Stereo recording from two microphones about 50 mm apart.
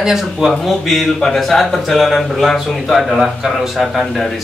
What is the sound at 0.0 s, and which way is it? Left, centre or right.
Speech, centre.